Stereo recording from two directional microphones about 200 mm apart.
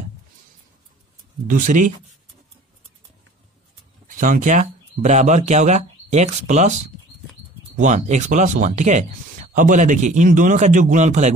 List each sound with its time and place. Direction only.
1.5 s speech: 40° right (ahead or behind)
4.1 s speech: 40° right (ahead or behind)
7.7 s speech: 35° right (ahead or behind)